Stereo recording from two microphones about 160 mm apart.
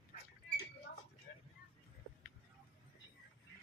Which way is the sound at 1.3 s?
65° left (ahead or behind).